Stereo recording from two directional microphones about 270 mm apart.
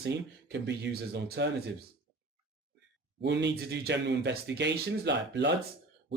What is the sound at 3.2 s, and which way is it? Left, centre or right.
Speech, right.